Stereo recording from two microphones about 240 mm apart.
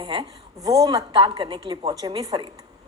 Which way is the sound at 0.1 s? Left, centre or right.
Centre.